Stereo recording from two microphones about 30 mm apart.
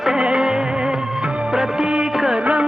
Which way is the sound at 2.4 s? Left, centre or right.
Right.